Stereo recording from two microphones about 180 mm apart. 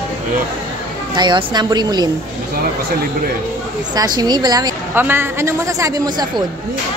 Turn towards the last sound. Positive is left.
turn(degrees=-20)  # may be behind; listen again after turning